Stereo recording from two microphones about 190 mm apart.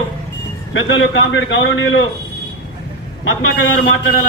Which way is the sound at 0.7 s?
85° left.